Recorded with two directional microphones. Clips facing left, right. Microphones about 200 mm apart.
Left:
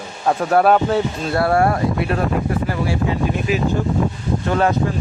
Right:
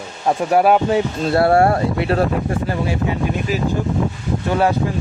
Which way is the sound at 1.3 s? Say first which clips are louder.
Right 3 dB; 30° right (ahead or behind).